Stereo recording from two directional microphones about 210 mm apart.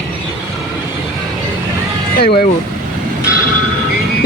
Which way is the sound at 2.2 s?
50° left (ahead or behind).